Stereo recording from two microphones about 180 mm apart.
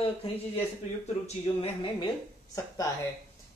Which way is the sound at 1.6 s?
30° left (ahead or behind).